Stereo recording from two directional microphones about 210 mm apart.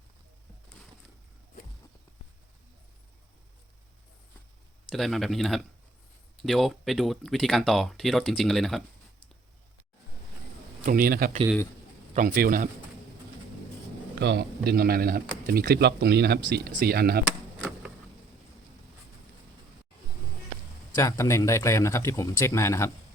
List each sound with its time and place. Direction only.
4.9 s speech: centre (ahead or behind)
10.8 s a man's voice: 45° right (ahead or behind)
14.2 s speech: 55° right (ahead or behind)
17.2 s a sound: 5° right (ahead or behind)
20.9 s speech: 15° left (ahead or behind)